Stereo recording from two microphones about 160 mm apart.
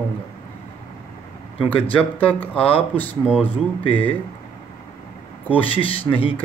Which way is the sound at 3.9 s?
35° left (ahead or behind).